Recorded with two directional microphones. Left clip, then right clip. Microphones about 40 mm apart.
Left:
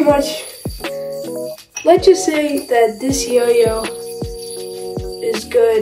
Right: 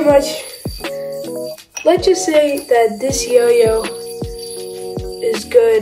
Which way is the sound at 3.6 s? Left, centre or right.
Centre.